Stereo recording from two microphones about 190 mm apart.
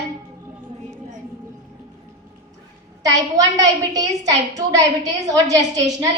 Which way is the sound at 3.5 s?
20° right (ahead or behind).